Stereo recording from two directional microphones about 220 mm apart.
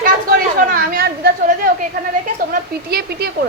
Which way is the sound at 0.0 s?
40° right (ahead or behind).